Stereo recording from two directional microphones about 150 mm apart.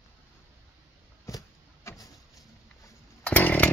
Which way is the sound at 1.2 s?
20° left (ahead or behind).